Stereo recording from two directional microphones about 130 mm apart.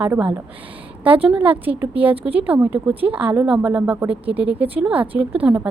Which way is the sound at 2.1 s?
45° right (ahead or behind).